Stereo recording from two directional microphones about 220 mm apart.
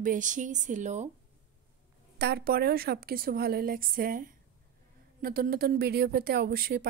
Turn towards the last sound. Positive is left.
turn(degrees=-45)  # may be behind; listen again after turning